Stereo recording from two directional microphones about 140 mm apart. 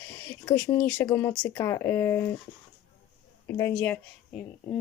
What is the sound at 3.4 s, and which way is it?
Speech, 20° left (ahead or behind).